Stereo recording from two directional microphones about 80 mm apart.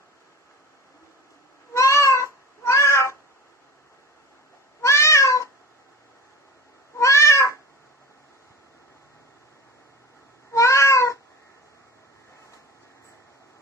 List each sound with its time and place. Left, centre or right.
1.7 s cat: left
4.8 s cat: left
7.0 s cat: left
10.5 s cat: left